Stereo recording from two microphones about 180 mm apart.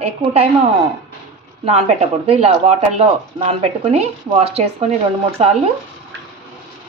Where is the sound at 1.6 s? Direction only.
35° right (ahead or behind).